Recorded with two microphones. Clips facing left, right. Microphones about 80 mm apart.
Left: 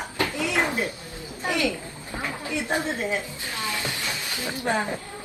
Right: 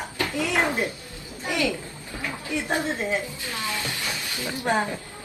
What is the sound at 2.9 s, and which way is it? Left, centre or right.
Speech, centre.